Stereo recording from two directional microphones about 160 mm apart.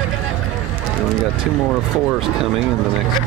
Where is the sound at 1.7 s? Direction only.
Centre (ahead or behind).